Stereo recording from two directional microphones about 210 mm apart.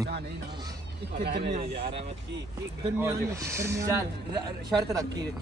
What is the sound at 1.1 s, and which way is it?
Speech, 50° right (ahead or behind).